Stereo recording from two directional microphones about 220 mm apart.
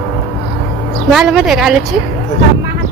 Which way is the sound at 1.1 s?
Centre (ahead or behind).